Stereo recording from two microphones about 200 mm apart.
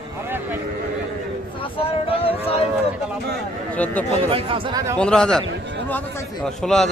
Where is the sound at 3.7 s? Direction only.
5° left (ahead or behind).